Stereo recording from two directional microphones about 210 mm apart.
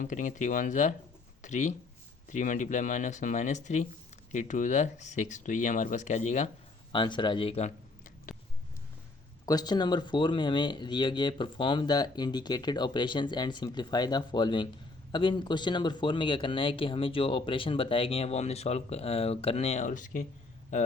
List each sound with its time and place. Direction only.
0.0 s speech: 35° left (ahead or behind)
6.9 s speech: 20° left (ahead or behind)
9.5 s speech: 20° left (ahead or behind); by 20.9 s 35° left (ahead or behind)